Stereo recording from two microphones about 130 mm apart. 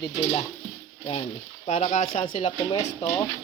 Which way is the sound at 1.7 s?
75° left (ahead or behind).